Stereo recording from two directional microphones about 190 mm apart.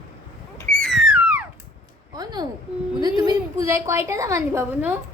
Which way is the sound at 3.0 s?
20° right (ahead or behind).